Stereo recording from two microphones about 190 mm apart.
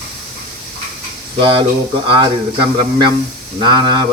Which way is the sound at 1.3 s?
25° right (ahead or behind).